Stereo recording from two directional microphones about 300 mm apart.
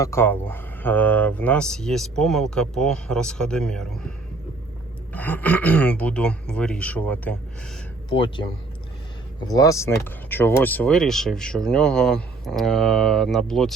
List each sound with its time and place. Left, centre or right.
0.0 s speech: centre
5.1 s speech: centre
8.1 s speech: centre